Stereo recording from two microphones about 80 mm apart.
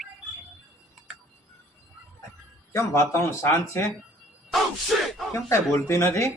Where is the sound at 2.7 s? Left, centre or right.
Left.